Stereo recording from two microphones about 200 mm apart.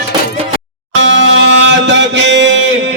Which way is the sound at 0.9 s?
65° right (ahead or behind).